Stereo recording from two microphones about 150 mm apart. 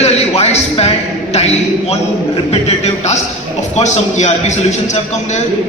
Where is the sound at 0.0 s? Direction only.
45° left (ahead or behind).